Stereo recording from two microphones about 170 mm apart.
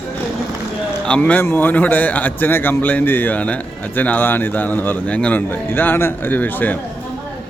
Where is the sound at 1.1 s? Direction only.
5° left (ahead or behind).